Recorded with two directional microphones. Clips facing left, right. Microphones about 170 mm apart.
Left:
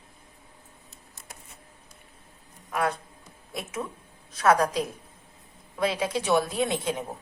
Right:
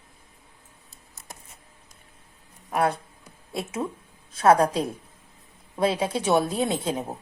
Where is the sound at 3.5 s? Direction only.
30° right (ahead or behind).